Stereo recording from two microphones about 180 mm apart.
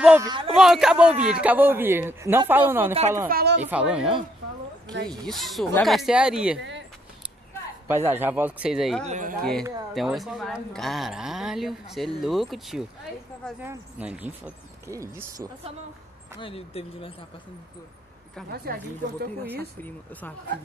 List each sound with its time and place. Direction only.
0.2 s speech: 25° right (ahead or behind)
0.5 s speech: 5° right (ahead or behind)
2.9 s speech: 35° right (ahead or behind)
3.3 s a woman's voice: 55° right (ahead or behind)
3.6 s speech: 5° right (ahead or behind)
7.9 s speech: 15° right (ahead or behind)
9.0 s speech: 45° right (ahead or behind)
9.4 s speech: centre (ahead or behind); by 15.5 s 20° right (ahead or behind)
16.3 s speech: 30° left (ahead or behind)
18.5 s a woman's voice: 60° right (ahead or behind)
19.8 s speech: 10° left (ahead or behind)